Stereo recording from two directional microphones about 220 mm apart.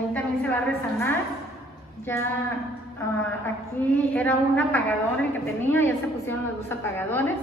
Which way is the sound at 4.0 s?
10° left (ahead or behind).